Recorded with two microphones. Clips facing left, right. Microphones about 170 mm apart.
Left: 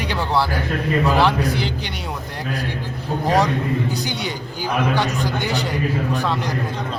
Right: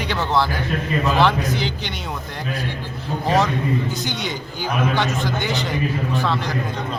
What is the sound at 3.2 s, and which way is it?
A man's voice, 15° left (ahead or behind).